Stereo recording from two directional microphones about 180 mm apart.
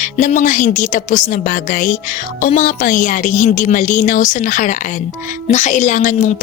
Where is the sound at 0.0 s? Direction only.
45° left (ahead or behind).